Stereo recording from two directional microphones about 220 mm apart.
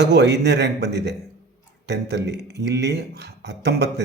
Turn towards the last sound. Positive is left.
turn(degrees=-50)  # may be behind; listen again after turning